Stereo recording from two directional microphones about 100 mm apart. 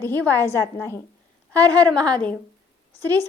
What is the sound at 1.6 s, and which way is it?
Speech, 15° left (ahead or behind).